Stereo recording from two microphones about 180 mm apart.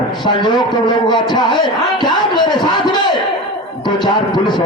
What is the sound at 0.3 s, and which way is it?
A man's voice, 25° left (ahead or behind).